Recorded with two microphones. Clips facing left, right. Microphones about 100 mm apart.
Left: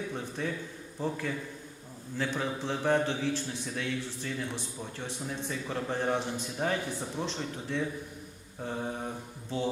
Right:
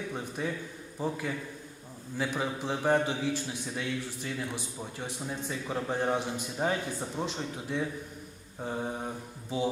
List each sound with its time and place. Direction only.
0.1 s a man's voice: 10° right (ahead or behind)